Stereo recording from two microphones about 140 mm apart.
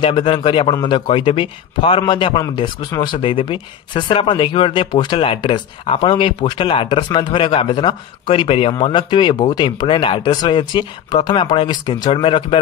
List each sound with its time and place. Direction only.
0.0 s speech: 40° left (ahead or behind)
3.2 s speech: 40° left (ahead or behind)